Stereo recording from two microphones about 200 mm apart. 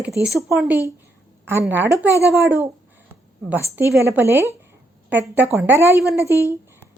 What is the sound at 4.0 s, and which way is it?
Speech, 10° right (ahead or behind).